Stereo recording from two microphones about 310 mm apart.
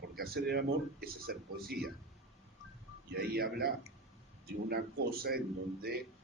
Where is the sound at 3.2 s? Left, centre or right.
Right.